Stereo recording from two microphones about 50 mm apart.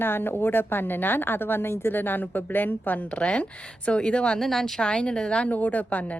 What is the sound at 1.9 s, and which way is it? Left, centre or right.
Speech, left.